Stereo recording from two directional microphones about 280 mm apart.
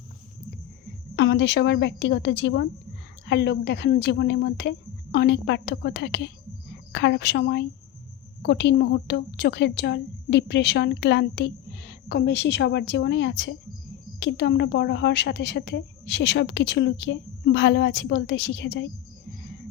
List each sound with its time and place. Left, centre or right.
1.1 s a woman's voice: left